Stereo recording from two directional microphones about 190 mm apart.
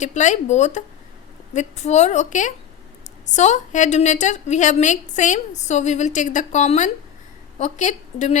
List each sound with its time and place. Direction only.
0.0 s a woman's voice: 40° left (ahead or behind)